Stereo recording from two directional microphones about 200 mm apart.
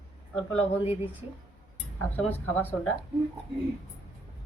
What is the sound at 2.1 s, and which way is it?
Speech, 10° left (ahead or behind).